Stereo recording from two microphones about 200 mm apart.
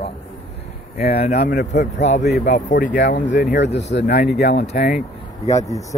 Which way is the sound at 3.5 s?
60° left (ahead or behind).